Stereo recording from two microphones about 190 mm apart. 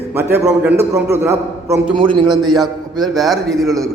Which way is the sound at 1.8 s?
25° right (ahead or behind).